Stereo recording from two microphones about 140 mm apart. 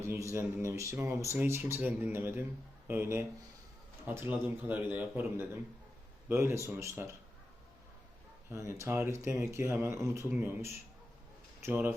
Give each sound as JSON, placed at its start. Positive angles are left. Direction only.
{"t": 0.0, "sound": "a sound", "side_deg": -20}
{"t": 0.3, "sound": "a man's voice", "side_deg": -20}
{"t": 8.4, "sound": "a man's voice", "side_deg": -20}